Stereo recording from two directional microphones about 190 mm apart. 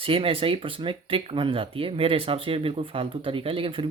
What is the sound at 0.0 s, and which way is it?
Speech, 30° right (ahead or behind).